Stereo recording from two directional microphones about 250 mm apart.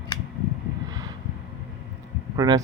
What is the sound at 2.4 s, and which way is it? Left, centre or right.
Speech, centre.